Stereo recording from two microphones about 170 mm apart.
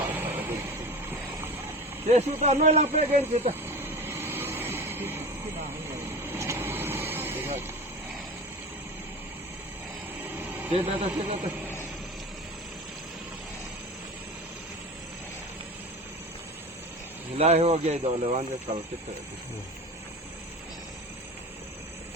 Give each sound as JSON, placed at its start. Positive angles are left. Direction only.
{"t": 0.0, "sound": "a sound", "side_deg": -10}
{"t": 2.0, "sound": "a man's voice", "side_deg": -40}
{"t": 3.5, "sound": "vehicle", "side_deg": -15}
{"t": 10.2, "sound": "a sound", "side_deg": -10}
{"t": 10.7, "sound": "a man's voice", "side_deg": -35}
{"t": 17.3, "sound": "a man's voice", "side_deg": -35}